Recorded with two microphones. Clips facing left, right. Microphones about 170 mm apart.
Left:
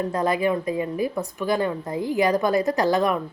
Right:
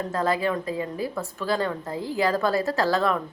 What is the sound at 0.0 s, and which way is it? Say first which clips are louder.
A woman's voice: left 2 dB; 20° left (ahead or behind).